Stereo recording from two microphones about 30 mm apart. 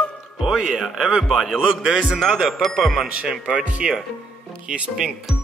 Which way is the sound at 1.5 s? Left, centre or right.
Right.